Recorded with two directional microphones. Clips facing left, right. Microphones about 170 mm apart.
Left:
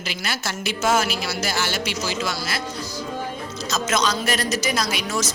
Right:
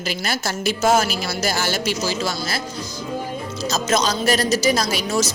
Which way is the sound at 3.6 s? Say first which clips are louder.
Right 2 dB; 30° right (ahead or behind).